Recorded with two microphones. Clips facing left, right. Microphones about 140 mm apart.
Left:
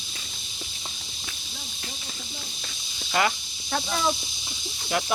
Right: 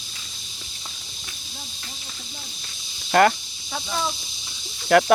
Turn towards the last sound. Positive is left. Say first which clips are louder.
# right 11 dB
turn(degrees=-65)  # may be behind; listen again after turning